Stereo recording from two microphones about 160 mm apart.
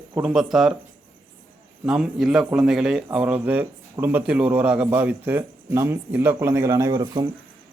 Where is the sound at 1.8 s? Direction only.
5° right (ahead or behind); by 7.3 s 25° right (ahead or behind).